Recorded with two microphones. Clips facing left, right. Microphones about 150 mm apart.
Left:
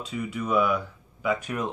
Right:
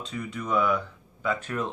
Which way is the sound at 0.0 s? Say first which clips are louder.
Left 3 dB; 10° left (ahead or behind).